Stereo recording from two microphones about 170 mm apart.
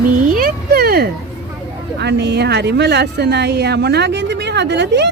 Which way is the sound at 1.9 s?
90° right.